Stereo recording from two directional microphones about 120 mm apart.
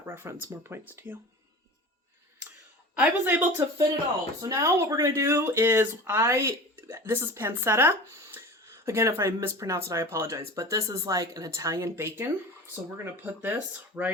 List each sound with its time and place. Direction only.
0.0 s speech: 20° right (ahead or behind)
2.9 s speech: 15° right (ahead or behind)
4.4 s speech: 25° right (ahead or behind)